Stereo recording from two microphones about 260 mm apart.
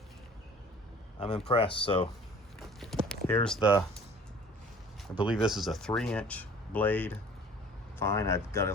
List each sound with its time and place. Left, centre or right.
1.2 s speech: left
2.6 s a sound: centre
5.1 s speech: centre